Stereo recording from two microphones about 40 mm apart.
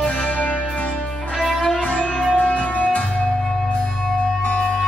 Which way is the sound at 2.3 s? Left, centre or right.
Left.